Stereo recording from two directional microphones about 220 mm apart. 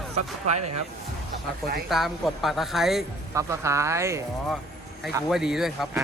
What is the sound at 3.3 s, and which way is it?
Speech, 15° right (ahead or behind).